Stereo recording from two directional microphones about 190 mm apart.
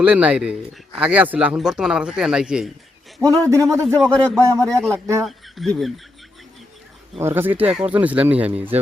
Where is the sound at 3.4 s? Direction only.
15° right (ahead or behind).